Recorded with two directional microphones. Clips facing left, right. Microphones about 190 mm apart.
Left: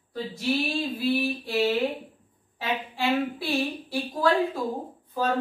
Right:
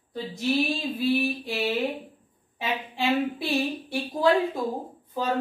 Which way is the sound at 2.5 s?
20° right (ahead or behind).